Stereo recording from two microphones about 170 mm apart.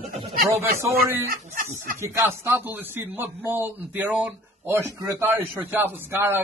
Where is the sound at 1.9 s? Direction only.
15° right (ahead or behind).